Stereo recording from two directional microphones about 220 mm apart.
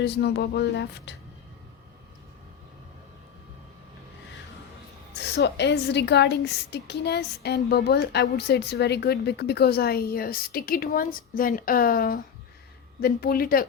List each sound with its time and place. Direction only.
0.0 s a woman's voice: 50° left (ahead or behind)
5.1 s a woman's voice: 50° left (ahead or behind)